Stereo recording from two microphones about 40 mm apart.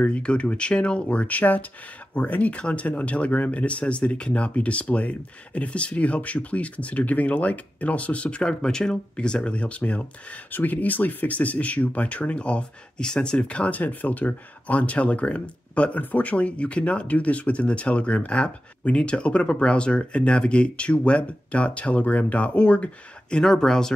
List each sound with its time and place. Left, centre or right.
0.0 s speech: left
10.5 s speech: left
13.4 s speech: left
23.3 s speech: centre